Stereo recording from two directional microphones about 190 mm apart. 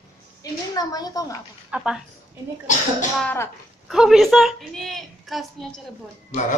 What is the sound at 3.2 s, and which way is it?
Speech, 10° left (ahead or behind).